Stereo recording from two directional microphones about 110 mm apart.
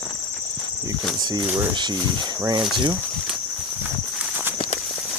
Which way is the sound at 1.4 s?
20° right (ahead or behind).